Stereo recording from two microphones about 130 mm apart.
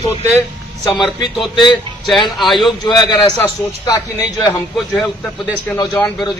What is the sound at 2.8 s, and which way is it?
Speech, 30° left (ahead or behind).